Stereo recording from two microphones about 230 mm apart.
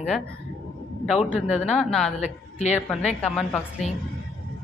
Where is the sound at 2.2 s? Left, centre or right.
Left.